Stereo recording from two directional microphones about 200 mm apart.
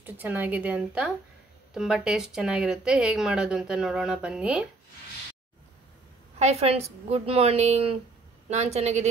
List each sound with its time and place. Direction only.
0.0 s a woman's voice: 10° right (ahead or behind)
6.4 s a woman's voice: 30° right (ahead or behind)